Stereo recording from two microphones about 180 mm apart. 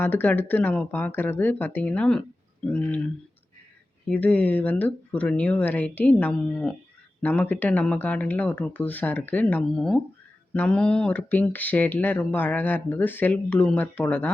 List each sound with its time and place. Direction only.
0.0 s speech: 10° left (ahead or behind)
4.1 s speech: 10° left (ahead or behind)